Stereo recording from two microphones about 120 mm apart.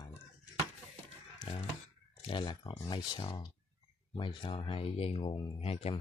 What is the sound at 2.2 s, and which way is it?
Speech, 45° left (ahead or behind).